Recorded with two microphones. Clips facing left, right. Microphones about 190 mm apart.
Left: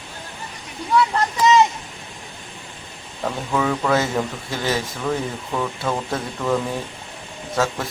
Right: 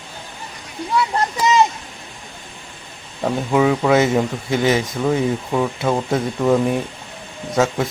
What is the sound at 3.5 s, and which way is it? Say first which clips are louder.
Speech: right 5 dB; 15° right (ahead or behind).